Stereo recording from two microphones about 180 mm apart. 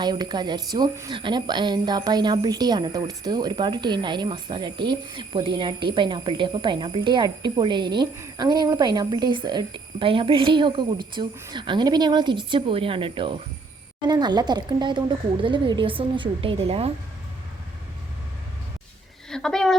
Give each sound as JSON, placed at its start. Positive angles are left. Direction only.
{"t": 0.0, "sound": "a woman's voice", "side_deg": -25}
{"t": 19.3, "sound": "speech", "side_deg": 5}